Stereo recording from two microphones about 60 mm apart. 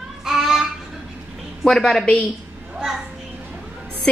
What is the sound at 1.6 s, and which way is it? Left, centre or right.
Speech, centre.